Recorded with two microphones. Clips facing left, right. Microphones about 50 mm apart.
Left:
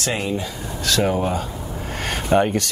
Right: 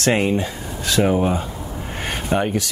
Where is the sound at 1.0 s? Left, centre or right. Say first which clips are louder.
Right 3 dB; centre.